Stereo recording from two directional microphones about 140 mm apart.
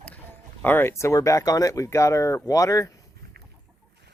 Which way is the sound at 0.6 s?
15° left (ahead or behind).